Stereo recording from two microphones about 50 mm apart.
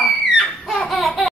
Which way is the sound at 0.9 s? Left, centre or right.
Centre.